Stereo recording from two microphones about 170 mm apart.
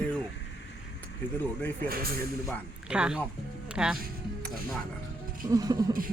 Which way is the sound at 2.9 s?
5° right (ahead or behind).